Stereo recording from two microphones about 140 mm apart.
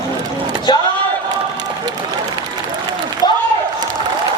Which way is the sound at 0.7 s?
30° left (ahead or behind).